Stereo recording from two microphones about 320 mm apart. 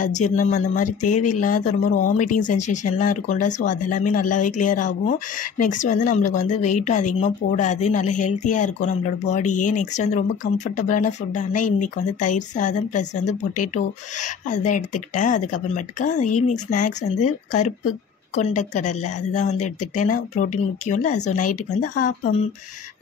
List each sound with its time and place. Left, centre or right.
0.2 s a woman's voice: left
14.2 s a woman's voice: left